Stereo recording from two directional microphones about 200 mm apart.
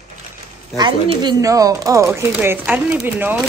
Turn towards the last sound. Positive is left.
turn(degrees=-10)  # may be behind; listen again after turning